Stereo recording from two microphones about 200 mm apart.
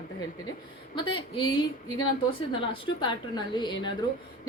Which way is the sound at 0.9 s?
25° left (ahead or behind).